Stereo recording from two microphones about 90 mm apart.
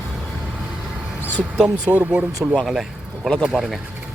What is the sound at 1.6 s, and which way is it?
Speech, 15° right (ahead or behind).